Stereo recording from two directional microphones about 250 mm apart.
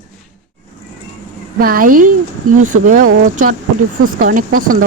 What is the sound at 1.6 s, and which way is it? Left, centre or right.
Speech, right.